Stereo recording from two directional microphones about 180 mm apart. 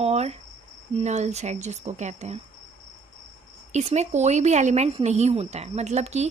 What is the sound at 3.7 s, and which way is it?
Speech, 40° right (ahead or behind).